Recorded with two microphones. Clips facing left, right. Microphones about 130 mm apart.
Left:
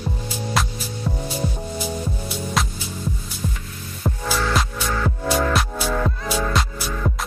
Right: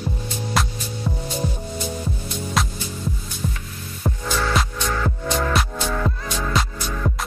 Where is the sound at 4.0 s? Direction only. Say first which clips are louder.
Left 1 dB; 5° left (ahead or behind).